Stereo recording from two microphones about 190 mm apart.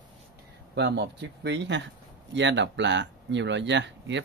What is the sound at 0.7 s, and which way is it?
Speech, 65° right (ahead or behind).